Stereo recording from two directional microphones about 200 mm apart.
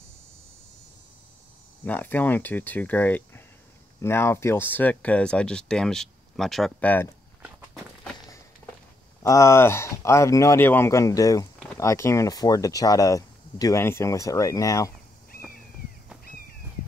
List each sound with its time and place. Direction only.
1.9 s speech: 10° left (ahead or behind)
9.2 s speech: 15° left (ahead or behind)